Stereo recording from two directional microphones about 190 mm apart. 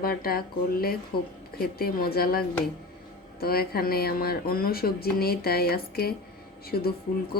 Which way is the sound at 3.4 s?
55° left (ahead or behind).